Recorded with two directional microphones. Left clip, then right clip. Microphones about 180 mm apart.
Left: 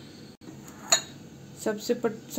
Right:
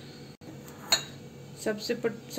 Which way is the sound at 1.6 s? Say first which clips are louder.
Left 3 dB; 50° left (ahead or behind).